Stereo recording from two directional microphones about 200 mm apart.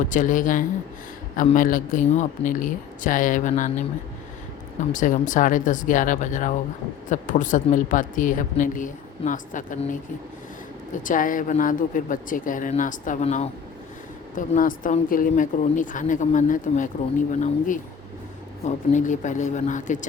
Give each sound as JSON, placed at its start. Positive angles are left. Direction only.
{"t": 0.1, "sound": "a woman's voice", "side_deg": 40}
{"t": 4.9, "sound": "a woman's voice", "side_deg": 40}
{"t": 18.6, "sound": "a woman's voice", "side_deg": 40}